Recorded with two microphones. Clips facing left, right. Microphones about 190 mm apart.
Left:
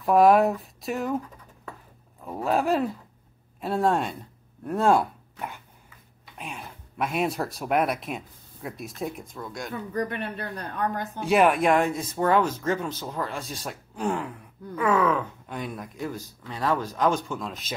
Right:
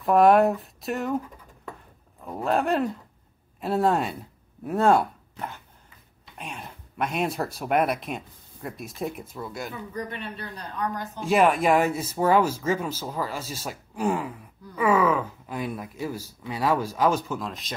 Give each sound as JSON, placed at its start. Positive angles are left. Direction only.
{"t": 0.0, "sound": "speech", "side_deg": 0}
{"t": 2.2, "sound": "speech", "side_deg": 0}
{"t": 6.3, "sound": "speech", "side_deg": 0}
{"t": 9.9, "sound": "speech", "side_deg": 55}
{"t": 11.2, "sound": "speech", "side_deg": 0}